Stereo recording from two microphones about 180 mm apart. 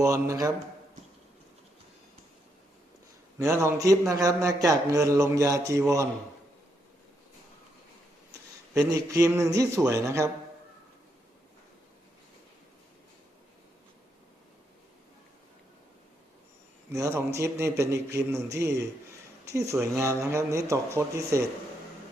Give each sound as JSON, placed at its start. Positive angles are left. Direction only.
{"t": 0.0, "sound": "a man's voice", "side_deg": -20}
{"t": 3.3, "sound": "speech", "side_deg": -15}
{"t": 8.7, "sound": "speech", "side_deg": -20}
{"t": 16.9, "sound": "speech", "side_deg": -15}